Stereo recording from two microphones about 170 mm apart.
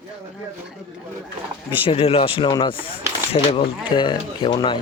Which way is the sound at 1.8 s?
35° left (ahead or behind).